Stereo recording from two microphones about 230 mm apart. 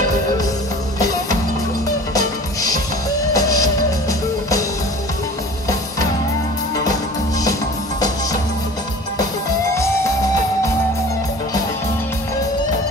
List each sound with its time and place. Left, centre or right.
2.1 s music: centre